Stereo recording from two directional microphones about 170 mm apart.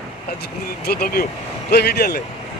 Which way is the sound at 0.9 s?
65° left (ahead or behind).